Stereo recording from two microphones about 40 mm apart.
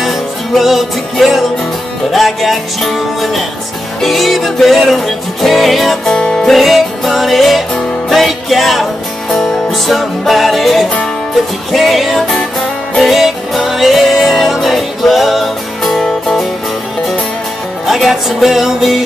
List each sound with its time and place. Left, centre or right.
0.0 s music: centre
6.0 s music: centre
6.4 s music: centre
9.8 s music: centre
13.1 s music: centre
17.8 s music: centre